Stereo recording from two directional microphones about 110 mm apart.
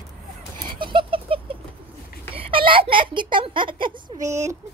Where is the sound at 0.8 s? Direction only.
50° right (ahead or behind).